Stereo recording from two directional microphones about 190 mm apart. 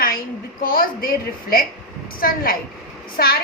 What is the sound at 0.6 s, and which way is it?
A woman's voice, 50° left (ahead or behind).